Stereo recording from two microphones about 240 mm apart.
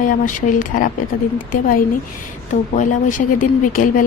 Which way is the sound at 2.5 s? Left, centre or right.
Left.